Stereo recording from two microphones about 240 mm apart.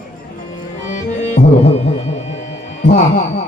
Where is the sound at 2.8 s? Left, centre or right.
Left.